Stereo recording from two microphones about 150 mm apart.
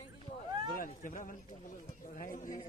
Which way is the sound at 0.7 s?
65° left (ahead or behind).